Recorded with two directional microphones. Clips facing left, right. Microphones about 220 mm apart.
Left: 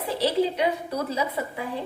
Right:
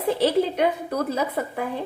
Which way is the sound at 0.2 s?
50° right (ahead or behind).